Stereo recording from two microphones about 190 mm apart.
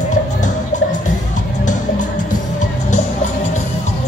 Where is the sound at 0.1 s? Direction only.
40° left (ahead or behind).